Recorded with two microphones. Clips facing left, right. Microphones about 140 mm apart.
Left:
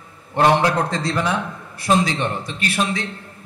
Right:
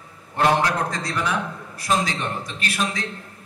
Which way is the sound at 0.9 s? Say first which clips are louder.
Left 4 dB; 25° left (ahead or behind).